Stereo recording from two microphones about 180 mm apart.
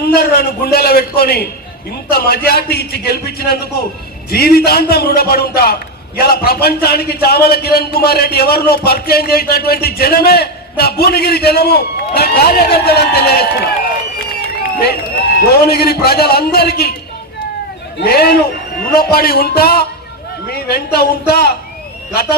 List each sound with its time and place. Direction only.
0.1 s a man's voice: 60° left (ahead or behind)
14.8 s a man's voice: 60° left (ahead or behind)
17.9 s a man's voice: 60° left (ahead or behind)